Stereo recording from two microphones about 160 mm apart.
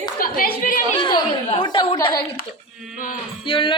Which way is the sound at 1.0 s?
30° left (ahead or behind).